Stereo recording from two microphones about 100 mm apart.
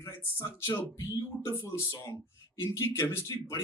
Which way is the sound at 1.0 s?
35° left (ahead or behind).